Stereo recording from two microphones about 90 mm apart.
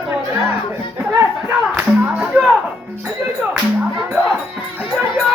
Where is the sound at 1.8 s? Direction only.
15° right (ahead or behind).